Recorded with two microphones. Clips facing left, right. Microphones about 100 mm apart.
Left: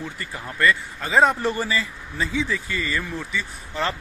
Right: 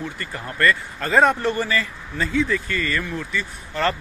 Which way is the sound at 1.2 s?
20° left (ahead or behind).